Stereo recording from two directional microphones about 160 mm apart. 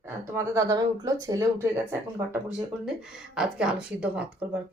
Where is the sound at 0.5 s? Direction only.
20° right (ahead or behind).